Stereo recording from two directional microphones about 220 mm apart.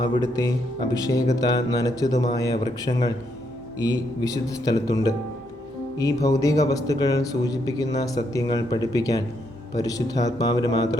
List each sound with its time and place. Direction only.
0.0 s speech: 15° left (ahead or behind)